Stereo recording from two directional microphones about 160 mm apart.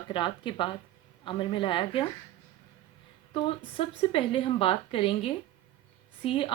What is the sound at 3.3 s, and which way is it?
Speech, 35° left (ahead or behind).